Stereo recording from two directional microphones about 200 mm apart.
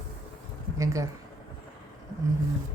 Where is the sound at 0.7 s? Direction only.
15° right (ahead or behind).